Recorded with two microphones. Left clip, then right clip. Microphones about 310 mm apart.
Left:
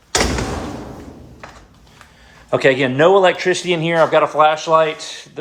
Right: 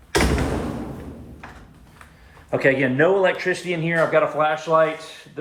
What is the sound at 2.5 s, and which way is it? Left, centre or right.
A man's voice, centre.